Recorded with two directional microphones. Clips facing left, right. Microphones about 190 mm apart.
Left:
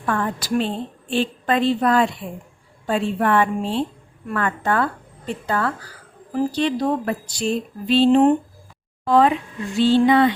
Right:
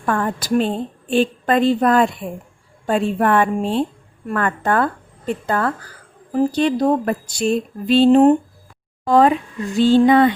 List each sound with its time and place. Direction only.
0.0 s speech: 45° right (ahead or behind)